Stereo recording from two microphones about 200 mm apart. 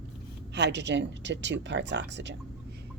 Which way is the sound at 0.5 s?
60° right (ahead or behind).